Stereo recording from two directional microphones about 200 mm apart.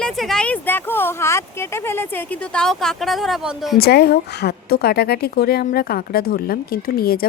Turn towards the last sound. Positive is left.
turn(degrees=50)  # may be behind; listen again after turning